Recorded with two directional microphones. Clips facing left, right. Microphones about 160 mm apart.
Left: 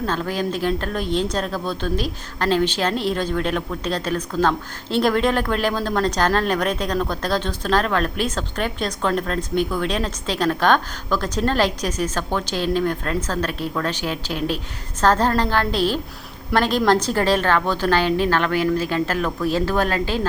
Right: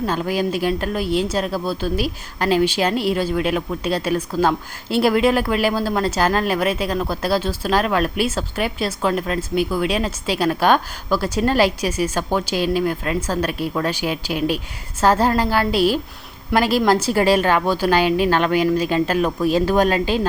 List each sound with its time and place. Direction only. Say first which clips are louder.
0.0 s speech: right 2 dB; 10° right (ahead or behind)